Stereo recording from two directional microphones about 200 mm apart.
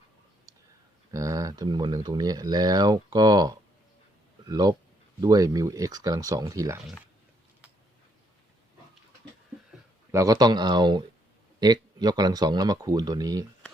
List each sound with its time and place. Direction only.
1.1 s speech: 15° right (ahead or behind)
6.8 s speech: centre (ahead or behind)
10.1 s speech: 15° right (ahead or behind)